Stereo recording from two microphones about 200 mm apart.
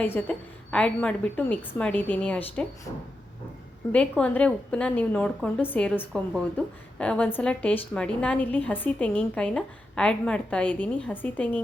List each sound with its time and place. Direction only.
0.0 s a woman's voice: 10° left (ahead or behind)